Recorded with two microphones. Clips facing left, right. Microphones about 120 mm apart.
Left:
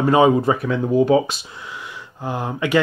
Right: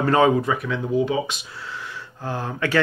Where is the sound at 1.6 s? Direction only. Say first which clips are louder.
Even; 15° left (ahead or behind).